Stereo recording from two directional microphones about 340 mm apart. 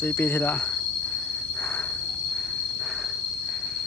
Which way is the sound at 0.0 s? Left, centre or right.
Centre.